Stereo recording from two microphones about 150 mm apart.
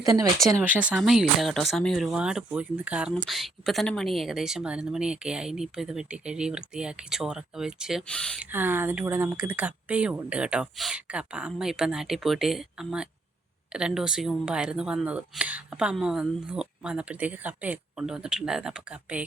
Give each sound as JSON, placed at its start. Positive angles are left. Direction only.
{"t": 0.0, "sound": "speech", "side_deg": -20}
{"t": 0.6, "sound": "speech", "side_deg": -10}
{"t": 8.4, "sound": "speech", "side_deg": -10}